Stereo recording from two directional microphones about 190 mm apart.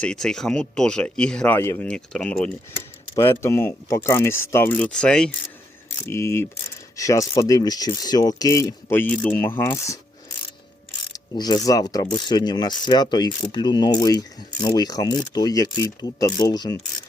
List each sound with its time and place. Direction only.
0.0 s speech: 5° left (ahead or behind)
11.1 s speech: 20° left (ahead or behind)